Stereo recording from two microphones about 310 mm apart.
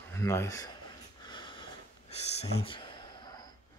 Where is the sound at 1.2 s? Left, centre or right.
Centre.